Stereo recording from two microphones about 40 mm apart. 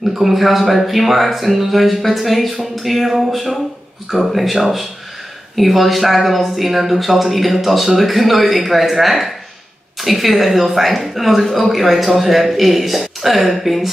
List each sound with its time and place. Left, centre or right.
0.1 s speech: centre